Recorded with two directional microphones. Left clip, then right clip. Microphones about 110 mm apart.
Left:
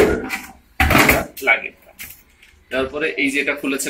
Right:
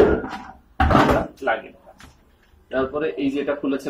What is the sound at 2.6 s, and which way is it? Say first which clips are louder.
Speech: left 2 dB; 15° left (ahead or behind).